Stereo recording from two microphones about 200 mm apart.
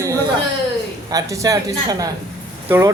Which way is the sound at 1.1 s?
15° right (ahead or behind).